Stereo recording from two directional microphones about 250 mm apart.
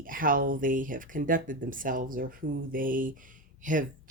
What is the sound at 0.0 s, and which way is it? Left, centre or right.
Speech, right.